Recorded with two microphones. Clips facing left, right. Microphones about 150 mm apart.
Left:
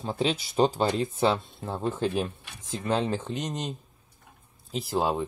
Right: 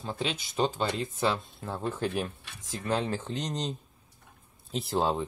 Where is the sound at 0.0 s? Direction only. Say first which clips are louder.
Left 6 dB; 30° left (ahead or behind); by 3.7 s 10° left (ahead or behind).